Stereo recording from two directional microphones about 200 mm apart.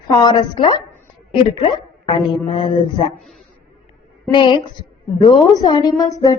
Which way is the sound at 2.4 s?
25° left (ahead or behind).